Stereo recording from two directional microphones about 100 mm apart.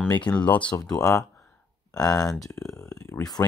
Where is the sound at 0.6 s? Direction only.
45° left (ahead or behind).